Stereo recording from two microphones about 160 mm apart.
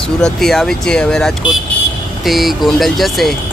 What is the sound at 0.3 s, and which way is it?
Speech, centre (ahead or behind).